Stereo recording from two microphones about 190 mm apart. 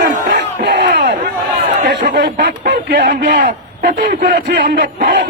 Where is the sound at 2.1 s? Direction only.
65° right (ahead or behind).